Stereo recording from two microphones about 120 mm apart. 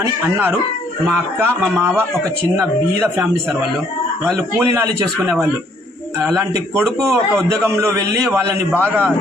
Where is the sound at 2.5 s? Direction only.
20° right (ahead or behind).